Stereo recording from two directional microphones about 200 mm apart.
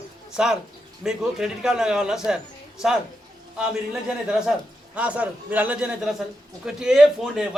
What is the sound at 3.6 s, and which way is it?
A man's voice, 5° right (ahead or behind).